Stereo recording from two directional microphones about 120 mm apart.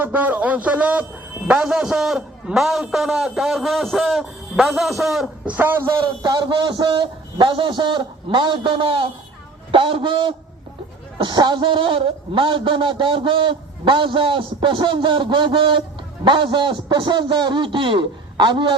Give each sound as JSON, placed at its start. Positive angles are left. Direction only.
{"t": 0.0, "sound": "a man's voice", "side_deg": -15}
{"t": 5.5, "sound": "a man's voice", "side_deg": -15}
{"t": 6.0, "sound": "a man's voice", "side_deg": -35}